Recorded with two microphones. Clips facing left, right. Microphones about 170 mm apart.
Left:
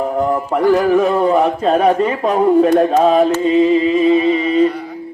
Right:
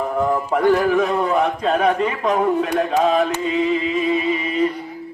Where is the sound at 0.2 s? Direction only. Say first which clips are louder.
Left 1 dB; 35° left (ahead or behind).